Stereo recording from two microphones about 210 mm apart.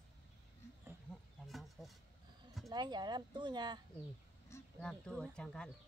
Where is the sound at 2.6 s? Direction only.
20° right (ahead or behind).